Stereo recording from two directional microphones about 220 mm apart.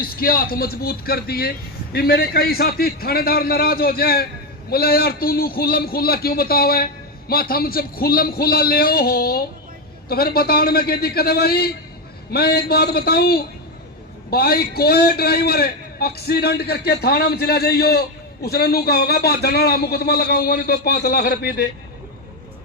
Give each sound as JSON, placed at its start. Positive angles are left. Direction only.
{"t": 0.0, "sound": "a man's voice", "side_deg": 40}